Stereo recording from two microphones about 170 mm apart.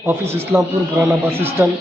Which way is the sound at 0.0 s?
15° right (ahead or behind).